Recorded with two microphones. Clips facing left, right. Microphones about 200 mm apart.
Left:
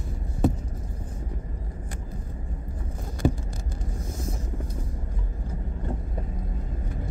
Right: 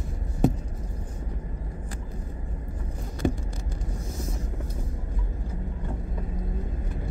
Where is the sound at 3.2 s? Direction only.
40° left (ahead or behind).